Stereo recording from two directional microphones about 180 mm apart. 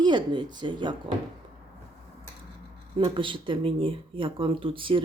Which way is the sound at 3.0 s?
30° right (ahead or behind).